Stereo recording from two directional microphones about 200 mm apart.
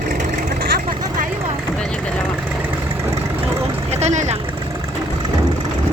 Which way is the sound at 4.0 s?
35° right (ahead or behind).